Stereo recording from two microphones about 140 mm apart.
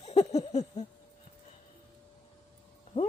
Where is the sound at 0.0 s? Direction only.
50° left (ahead or behind).